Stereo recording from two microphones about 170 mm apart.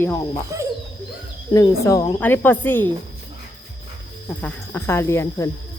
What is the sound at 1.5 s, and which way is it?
Speech, 20° left (ahead or behind).